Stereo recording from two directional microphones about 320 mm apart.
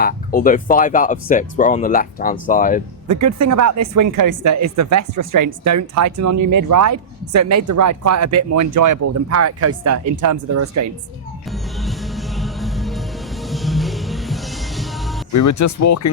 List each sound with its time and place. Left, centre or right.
0.0 s speech: left
3.1 s speech: right
11.5 s music: centre
15.3 s speech: left